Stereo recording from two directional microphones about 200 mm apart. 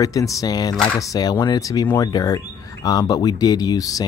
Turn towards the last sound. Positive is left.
turn(degrees=20)  # may be behind; listen again after turning